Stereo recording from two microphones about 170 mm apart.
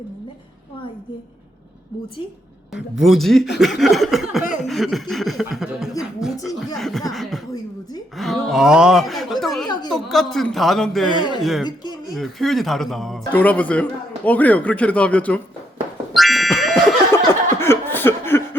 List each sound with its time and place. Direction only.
2.7 s a man's voice: centre (ahead or behind)
4.6 s chuckle: centre (ahead or behind)
6.0 s a sound: 5° right (ahead or behind)
6.4 s a man's voice: centre (ahead or behind)
9.6 s speech: 25° left (ahead or behind)
9.9 s a man's voice: centre (ahead or behind)
11.6 s speech: 25° left (ahead or behind)
12.1 s a man's voice: centre (ahead or behind)
16.1 s music: centre (ahead or behind)
17.1 s chuckle: 15° left (ahead or behind)